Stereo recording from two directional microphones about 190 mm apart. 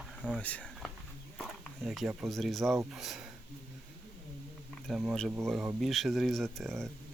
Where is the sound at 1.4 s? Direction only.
Centre (ahead or behind).